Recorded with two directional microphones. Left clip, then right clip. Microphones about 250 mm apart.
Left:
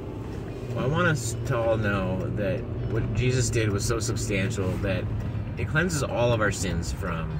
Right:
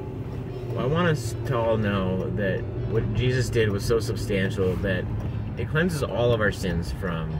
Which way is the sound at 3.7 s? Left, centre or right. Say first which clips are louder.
Right 4 dB; centre.